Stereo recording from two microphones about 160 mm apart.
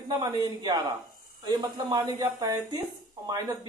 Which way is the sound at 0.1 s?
25° right (ahead or behind).